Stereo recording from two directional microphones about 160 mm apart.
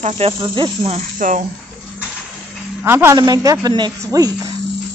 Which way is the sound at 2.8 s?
15° right (ahead or behind).